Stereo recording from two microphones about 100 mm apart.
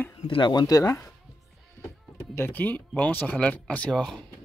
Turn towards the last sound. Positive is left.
turn(degrees=5)  # may be behind; listen again after turning